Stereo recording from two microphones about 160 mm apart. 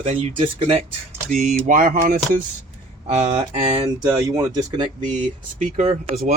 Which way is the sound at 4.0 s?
20° right (ahead or behind).